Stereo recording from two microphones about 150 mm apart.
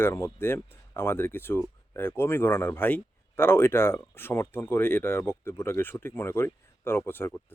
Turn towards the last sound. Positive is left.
turn(degrees=15)  # may be behind; listen again after turning